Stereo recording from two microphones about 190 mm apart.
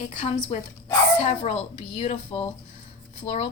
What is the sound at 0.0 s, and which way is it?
A woman's voice, 40° left (ahead or behind).